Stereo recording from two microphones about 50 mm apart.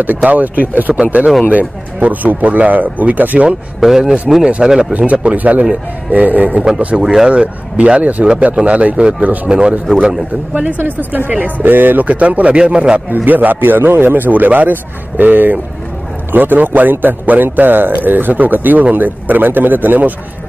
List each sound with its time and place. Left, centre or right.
0.2 s a man's voice: right
0.9 s a man's voice: right
3.8 s speech: centre
4.9 s a man's voice: right
7.0 s speech: centre
7.2 s speech: right
10.5 s a man's voice: right
12.0 s speech: right
13.1 s a man's voice: right